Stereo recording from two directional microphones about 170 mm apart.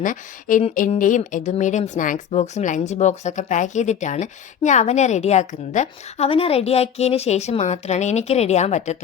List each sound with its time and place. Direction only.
0.0 s speech: 50° left (ahead or behind)